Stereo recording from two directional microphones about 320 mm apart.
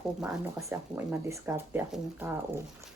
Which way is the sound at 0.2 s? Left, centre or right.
Centre.